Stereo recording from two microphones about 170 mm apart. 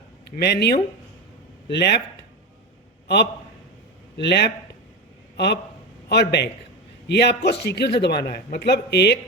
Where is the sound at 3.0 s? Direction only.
80° left.